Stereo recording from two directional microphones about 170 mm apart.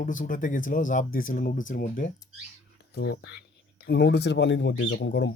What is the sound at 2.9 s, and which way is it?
Speech, 75° left (ahead or behind).